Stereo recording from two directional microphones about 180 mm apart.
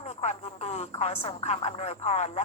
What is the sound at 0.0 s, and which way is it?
Speech, 35° left (ahead or behind).